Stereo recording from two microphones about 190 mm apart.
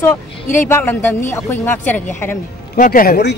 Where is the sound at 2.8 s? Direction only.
50° left (ahead or behind).